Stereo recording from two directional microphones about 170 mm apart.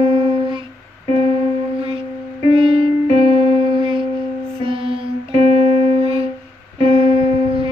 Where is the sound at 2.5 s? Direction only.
30° right (ahead or behind).